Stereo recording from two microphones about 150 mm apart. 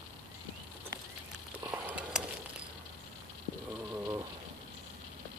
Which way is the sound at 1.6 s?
10° right (ahead or behind).